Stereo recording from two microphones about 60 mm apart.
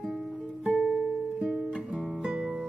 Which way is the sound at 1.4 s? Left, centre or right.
Centre.